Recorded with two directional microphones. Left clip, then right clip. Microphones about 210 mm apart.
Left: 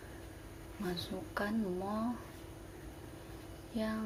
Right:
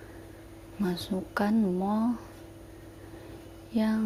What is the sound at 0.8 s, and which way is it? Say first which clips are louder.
Speech: right 8 dB; 40° right (ahead or behind).